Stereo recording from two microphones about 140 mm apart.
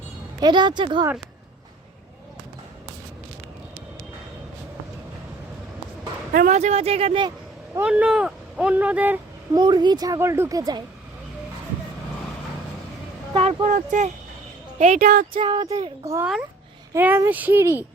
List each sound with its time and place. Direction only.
0.3 s speech: 30° right (ahead or behind)
6.5 s speech: 50° right (ahead or behind)
7.8 s speech: 10° right (ahead or behind)
9.6 s a woman's voice: 30° right (ahead or behind)
13.3 s speech: 40° right (ahead or behind)
13.7 s speech: 60° right (ahead or behind)
15.0 s speech: 90° right
15.3 s speech: 35° right (ahead or behind)
15.7 s a woman's voice: 25° right (ahead or behind)